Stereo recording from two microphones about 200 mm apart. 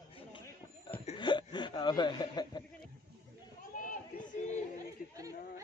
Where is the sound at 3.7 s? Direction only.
40° left (ahead or behind).